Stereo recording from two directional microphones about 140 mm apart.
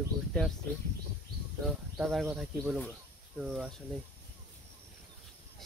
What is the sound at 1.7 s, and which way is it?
Speech, centre (ahead or behind).